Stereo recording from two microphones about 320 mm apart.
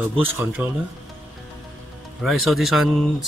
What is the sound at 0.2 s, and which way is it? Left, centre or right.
Speech, centre.